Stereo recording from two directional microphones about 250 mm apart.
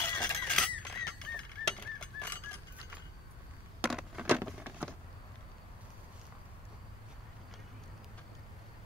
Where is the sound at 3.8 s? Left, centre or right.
Centre.